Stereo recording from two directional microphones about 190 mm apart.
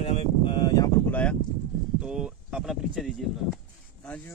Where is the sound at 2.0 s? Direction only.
5° right (ahead or behind).